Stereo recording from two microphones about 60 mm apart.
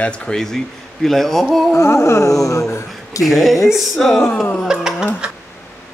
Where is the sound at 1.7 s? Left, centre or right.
Left.